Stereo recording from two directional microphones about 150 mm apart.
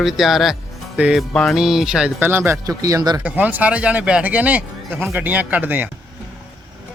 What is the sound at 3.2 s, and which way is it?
A man's voice, 10° right (ahead or behind).